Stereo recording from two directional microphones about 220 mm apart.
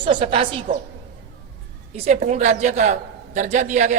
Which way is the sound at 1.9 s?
30° right (ahead or behind).